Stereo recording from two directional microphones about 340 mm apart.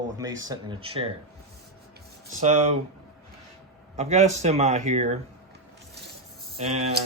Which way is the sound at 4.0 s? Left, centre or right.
Centre.